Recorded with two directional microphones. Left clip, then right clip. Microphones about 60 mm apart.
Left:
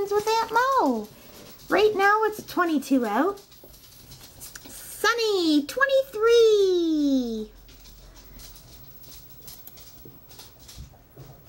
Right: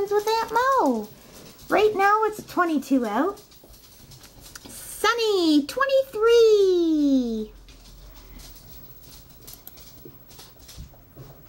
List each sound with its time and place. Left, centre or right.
0.3 s a child's voice: centre
1.8 s speech: left
4.6 s a child's voice: centre